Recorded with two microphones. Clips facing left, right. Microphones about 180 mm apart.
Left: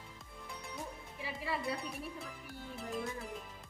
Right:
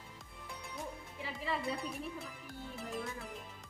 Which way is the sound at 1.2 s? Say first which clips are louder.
Even; 5° left (ahead or behind).